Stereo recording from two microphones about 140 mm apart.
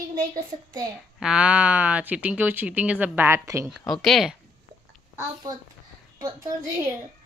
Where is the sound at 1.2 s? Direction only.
5° right (ahead or behind).